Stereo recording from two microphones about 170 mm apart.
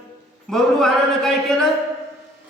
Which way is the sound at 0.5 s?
Centre (ahead or behind).